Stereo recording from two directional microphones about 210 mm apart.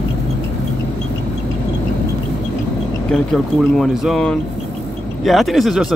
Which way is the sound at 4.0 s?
Centre (ahead or behind).